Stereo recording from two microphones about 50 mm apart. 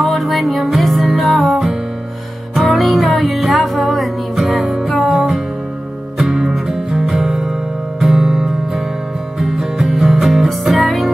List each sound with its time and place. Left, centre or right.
0.0 s music: centre